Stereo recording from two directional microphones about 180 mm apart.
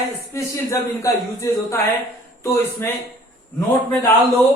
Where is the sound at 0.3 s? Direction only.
15° left (ahead or behind).